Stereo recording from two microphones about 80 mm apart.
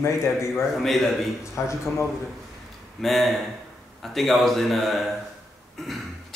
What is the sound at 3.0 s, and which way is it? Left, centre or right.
Speech, centre.